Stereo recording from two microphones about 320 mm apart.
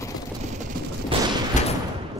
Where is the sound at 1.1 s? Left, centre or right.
Centre.